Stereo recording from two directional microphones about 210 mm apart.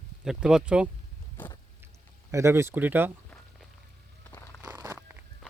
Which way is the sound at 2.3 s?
15° right (ahead or behind).